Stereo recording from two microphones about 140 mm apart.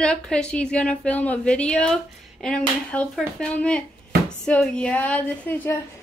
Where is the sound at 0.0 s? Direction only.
5° left (ahead or behind).